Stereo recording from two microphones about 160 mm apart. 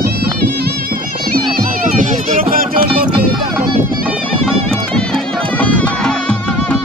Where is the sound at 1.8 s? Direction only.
50° right (ahead or behind).